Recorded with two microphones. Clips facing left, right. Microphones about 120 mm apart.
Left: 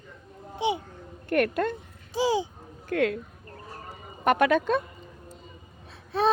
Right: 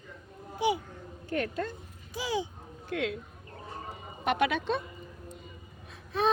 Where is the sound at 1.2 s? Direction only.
65° left (ahead or behind).